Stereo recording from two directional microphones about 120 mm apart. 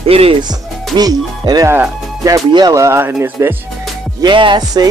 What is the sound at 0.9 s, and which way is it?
Speech, 35° right (ahead or behind).